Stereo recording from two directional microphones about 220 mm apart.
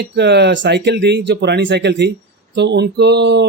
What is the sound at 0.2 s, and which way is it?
Speech, 50° right (ahead or behind).